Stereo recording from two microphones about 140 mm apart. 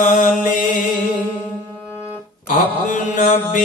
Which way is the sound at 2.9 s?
70° left (ahead or behind).